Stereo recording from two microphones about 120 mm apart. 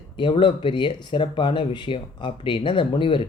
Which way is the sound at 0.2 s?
40° left (ahead or behind).